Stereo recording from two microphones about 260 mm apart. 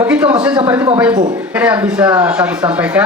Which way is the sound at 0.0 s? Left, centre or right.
Centre.